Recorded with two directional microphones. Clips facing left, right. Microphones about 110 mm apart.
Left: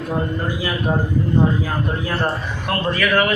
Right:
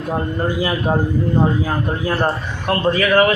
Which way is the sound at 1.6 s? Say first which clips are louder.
Right 3 dB; 25° right (ahead or behind).